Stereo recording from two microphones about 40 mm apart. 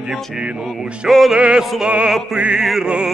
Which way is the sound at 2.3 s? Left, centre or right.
Right.